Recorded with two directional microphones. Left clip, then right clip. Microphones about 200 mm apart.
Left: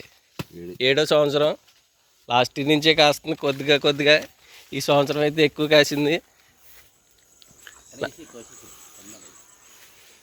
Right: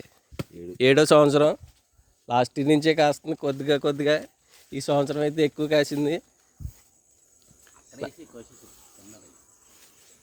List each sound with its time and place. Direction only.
0.8 s speech: 55° right (ahead or behind)
2.2 s speech: 30° right (ahead or behind); by 6.2 s 10° right (ahead or behind)
7.3 s a sound: centre (ahead or behind)